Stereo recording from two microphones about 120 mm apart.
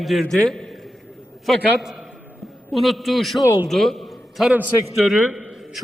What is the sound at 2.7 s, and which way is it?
Speech, centre (ahead or behind).